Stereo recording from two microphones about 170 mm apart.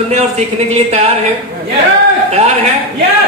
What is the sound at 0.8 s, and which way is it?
Speech, 35° right (ahead or behind).